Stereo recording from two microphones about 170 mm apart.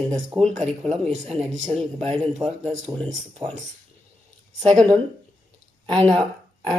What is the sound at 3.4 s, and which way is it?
Speech, 25° right (ahead or behind).